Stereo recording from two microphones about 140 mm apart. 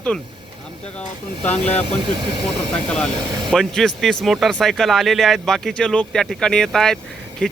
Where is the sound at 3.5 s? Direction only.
5° left (ahead or behind).